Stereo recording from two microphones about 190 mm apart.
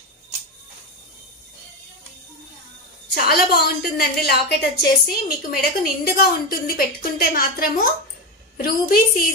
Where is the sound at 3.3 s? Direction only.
55° left (ahead or behind).